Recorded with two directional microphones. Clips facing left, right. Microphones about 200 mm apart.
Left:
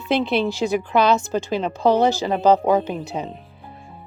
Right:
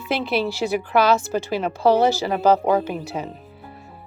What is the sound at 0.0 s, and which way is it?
Speech, 5° right (ahead or behind).